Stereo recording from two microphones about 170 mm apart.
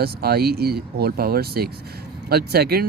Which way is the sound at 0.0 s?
65° right (ahead or behind).